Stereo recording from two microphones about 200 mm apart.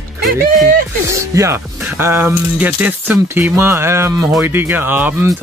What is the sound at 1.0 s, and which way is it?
Speech, 15° right (ahead or behind).